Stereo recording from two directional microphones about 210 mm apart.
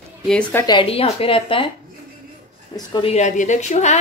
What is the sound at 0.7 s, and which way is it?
Speech, 25° left (ahead or behind).